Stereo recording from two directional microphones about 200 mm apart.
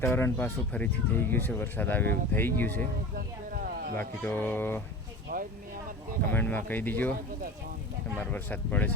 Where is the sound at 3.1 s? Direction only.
45° right (ahead or behind).